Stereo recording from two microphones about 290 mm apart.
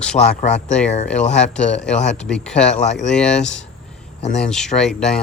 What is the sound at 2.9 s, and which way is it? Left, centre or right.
Speech, centre.